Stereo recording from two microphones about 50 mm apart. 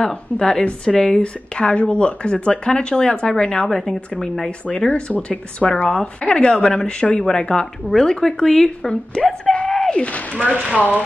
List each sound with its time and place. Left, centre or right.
0.0 s a woman's voice: centre
3.6 s speech: centre
4.5 s a woman's voice: left
10.4 s speech: right